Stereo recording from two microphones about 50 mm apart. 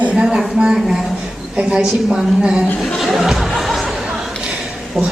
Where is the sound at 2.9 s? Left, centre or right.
Centre.